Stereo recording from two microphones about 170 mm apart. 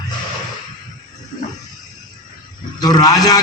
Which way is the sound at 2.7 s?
25° left (ahead or behind).